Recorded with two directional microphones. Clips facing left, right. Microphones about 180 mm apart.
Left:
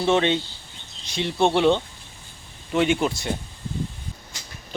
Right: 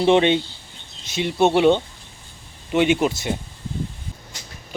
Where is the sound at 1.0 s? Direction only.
5° right (ahead or behind).